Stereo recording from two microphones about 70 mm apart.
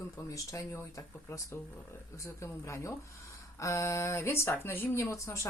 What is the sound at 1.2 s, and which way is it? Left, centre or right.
Speech, left.